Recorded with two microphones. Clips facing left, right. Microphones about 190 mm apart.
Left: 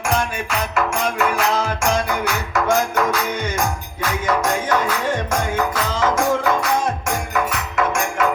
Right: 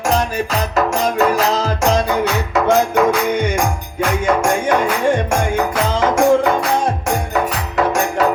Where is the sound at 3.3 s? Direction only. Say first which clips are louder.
Right 6 dB; 15° right (ahead or behind).